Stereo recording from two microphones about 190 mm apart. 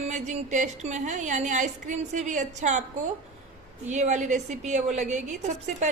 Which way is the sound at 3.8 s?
40° right (ahead or behind).